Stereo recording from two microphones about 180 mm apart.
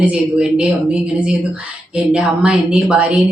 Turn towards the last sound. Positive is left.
turn(degrees=-5)  # may be behind; listen again after turning